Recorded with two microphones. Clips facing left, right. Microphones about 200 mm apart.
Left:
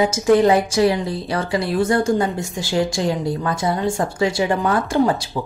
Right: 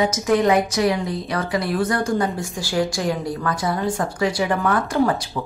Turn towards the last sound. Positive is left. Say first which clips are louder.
# left 2 dB
turn(degrees=25)  # may be behind; listen again after turning